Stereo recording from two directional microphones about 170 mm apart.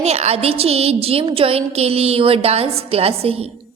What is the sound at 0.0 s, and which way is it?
A woman's voice, 40° right (ahead or behind).